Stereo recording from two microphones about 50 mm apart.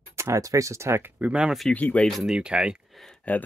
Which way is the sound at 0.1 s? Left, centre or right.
Right.